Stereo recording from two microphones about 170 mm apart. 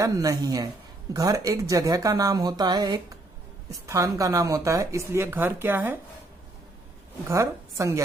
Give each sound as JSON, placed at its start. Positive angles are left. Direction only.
{"t": 0.0, "sound": "speech", "side_deg": -20}
{"t": 7.3, "sound": "speech", "side_deg": -15}